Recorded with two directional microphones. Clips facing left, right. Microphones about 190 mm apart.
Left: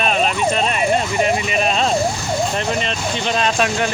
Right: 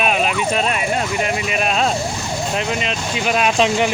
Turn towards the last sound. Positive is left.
turn(degrees=-20)  # may be behind; listen again after turning